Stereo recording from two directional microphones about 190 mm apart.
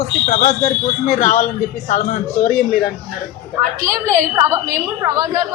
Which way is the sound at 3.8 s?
15° right (ahead or behind).